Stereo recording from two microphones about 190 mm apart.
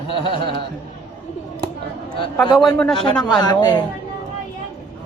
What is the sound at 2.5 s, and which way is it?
Speech, centre (ahead or behind).